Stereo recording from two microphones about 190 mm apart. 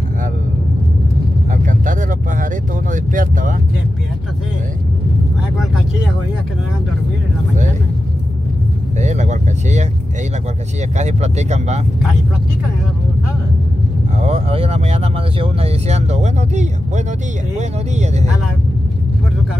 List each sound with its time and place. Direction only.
1.7 s vehicle: 45° right (ahead or behind)
8.9 s vehicle: 40° right (ahead or behind)
11.0 s speech: 35° right (ahead or behind)
14.2 s speech: 30° right (ahead or behind)